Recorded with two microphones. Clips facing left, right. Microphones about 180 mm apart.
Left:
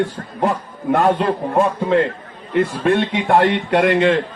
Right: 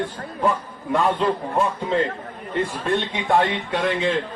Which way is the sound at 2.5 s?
70° left (ahead or behind).